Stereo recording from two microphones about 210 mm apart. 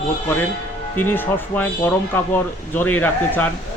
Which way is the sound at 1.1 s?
10° left (ahead or behind).